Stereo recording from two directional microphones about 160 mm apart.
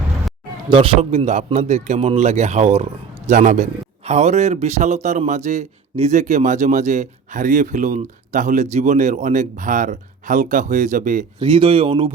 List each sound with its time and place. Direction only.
0.7 s a man's voice: 40° right (ahead or behind)
11.3 s speech: 35° right (ahead or behind)